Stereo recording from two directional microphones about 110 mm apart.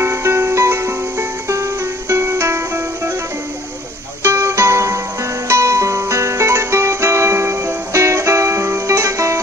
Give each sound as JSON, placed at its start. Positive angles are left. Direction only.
{"t": 0.0, "sound": "music", "side_deg": -25}
{"t": 4.2, "sound": "music", "side_deg": -25}